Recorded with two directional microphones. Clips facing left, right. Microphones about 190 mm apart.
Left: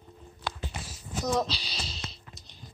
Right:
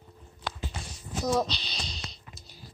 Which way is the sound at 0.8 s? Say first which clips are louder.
Right 2 dB; centre (ahead or behind).